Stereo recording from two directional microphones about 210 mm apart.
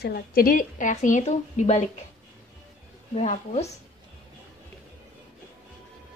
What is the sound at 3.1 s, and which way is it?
Speech, 30° left (ahead or behind).